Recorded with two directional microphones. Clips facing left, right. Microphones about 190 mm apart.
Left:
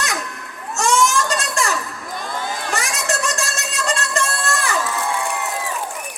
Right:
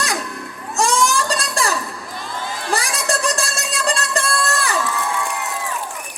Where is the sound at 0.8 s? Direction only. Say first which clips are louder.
Even; 35° right (ahead or behind).